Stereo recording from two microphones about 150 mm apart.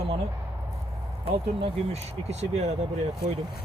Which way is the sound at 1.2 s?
40° right (ahead or behind).